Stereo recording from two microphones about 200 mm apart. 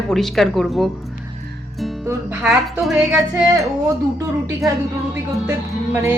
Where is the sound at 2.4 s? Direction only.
5° right (ahead or behind).